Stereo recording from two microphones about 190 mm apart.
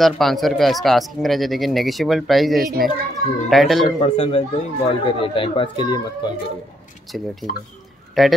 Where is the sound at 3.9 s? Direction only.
30° left (ahead or behind).